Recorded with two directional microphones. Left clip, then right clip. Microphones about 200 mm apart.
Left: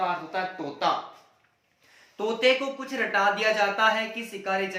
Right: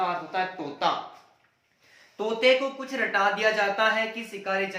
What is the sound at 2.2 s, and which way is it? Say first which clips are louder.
Speech: right 1 dB; 5° left (ahead or behind).